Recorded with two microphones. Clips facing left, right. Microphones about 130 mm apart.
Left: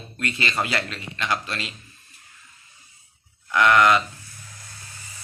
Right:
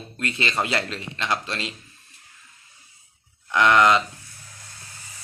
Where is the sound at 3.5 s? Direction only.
25° right (ahead or behind).